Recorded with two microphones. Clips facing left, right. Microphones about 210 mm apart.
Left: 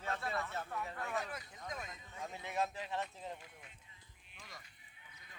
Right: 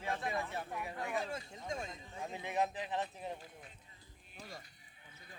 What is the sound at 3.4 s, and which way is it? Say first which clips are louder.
Speech: right 4 dB; 35° right (ahead or behind).